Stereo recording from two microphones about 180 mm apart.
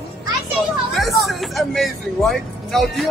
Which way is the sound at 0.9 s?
Centre (ahead or behind).